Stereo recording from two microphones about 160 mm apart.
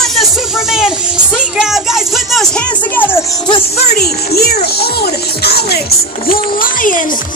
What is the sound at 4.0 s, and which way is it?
Speech, 80° left.